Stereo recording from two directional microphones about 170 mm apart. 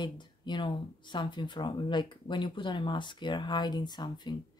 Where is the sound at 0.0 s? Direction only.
25° left (ahead or behind).